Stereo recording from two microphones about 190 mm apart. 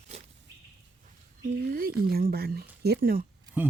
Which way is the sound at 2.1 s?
55° right (ahead or behind).